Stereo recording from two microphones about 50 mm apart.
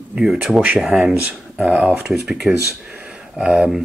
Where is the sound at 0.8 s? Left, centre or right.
Centre.